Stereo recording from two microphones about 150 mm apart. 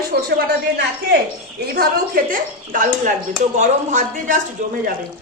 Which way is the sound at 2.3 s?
60° right (ahead or behind).